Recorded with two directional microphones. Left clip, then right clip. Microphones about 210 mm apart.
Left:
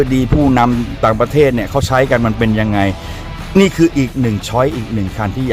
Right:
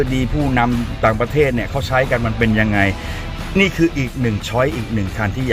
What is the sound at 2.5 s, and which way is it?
Speech, 20° left (ahead or behind).